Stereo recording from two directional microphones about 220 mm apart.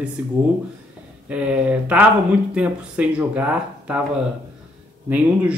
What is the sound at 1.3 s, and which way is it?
Speech, 5° right (ahead or behind).